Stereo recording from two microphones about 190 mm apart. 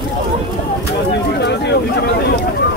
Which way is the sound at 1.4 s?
65° left (ahead or behind).